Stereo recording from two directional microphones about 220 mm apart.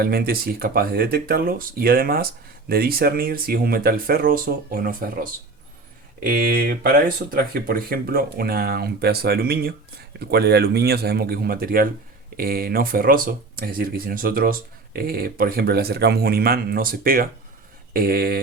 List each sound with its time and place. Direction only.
0.0 s speech: 45° right (ahead or behind)